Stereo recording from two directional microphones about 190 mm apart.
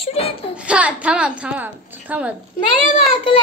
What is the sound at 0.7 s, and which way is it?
A woman's voice, 5° right (ahead or behind).